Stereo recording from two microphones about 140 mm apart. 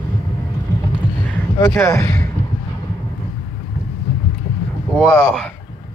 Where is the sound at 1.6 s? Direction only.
20° left (ahead or behind).